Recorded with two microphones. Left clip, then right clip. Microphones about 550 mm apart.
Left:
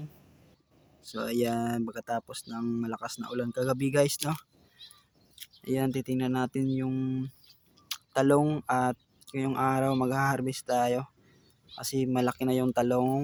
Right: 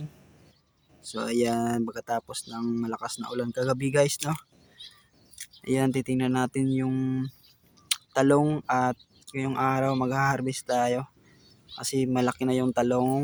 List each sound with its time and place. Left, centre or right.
1.0 s speech: left
5.6 s speech: left